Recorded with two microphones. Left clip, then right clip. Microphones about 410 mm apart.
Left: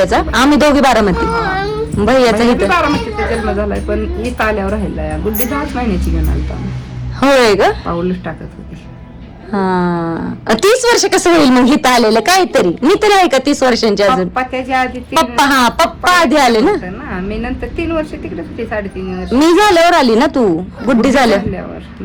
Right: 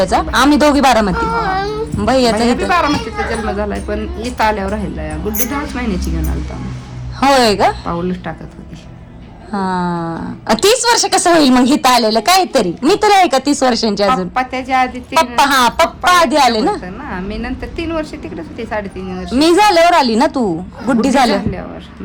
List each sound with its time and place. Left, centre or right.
0.0 s a woman's voice: centre
1.2 s baby cry: centre
2.0 s a woman's voice: centre
7.2 s a woman's voice: centre
9.5 s a woman's voice: centre